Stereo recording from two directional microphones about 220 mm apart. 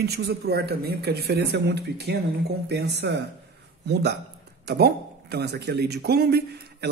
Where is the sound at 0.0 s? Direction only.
45° right (ahead or behind).